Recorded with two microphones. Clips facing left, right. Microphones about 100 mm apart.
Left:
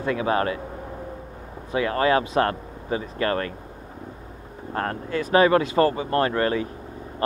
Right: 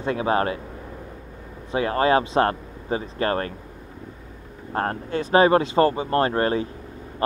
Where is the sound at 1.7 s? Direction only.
30° right (ahead or behind).